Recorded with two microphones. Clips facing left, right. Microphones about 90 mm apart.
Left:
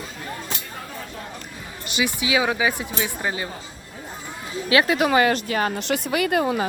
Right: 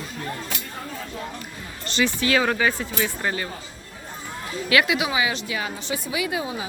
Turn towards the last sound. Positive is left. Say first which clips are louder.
# left 6 dB
turn(degrees=60)  # may be behind; listen again after turning